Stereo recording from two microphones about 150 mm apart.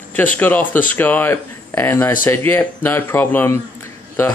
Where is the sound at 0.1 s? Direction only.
10° left (ahead or behind).